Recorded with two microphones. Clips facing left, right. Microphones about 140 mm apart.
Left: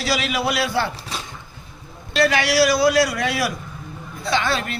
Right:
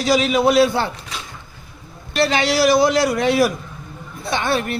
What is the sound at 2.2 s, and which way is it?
Speech, 25° right (ahead or behind).